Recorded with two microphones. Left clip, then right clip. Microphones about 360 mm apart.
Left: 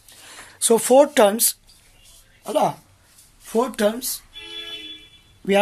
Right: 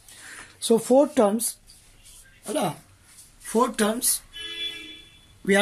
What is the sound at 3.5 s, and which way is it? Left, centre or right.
Speech, centre.